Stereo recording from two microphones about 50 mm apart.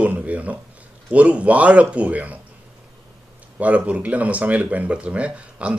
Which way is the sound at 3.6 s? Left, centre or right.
Right.